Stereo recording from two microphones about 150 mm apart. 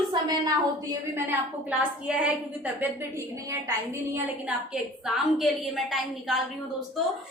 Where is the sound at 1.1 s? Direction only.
10° right (ahead or behind).